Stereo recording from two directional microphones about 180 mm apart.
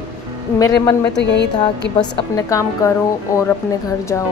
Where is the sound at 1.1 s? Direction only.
75° left (ahead or behind).